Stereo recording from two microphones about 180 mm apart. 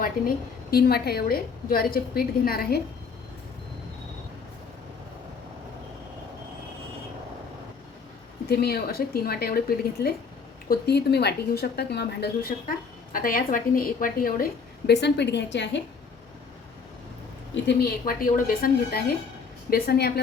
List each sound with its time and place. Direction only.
0.0 s a woman's voice: 55° left (ahead or behind)
8.4 s a woman's voice: 60° left (ahead or behind)
14.8 s a woman's voice: 70° left (ahead or behind)
17.5 s a woman's voice: 65° left (ahead or behind)